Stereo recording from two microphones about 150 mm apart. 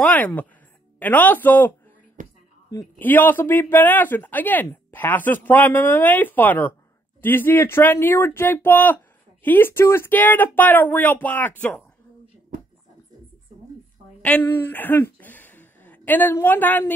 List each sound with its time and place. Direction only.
0.0 s speech: 10° left (ahead or behind)
2.2 s a sound: 55° right (ahead or behind)
2.7 s speech: 10° left (ahead or behind)
14.2 s speech: 10° left (ahead or behind)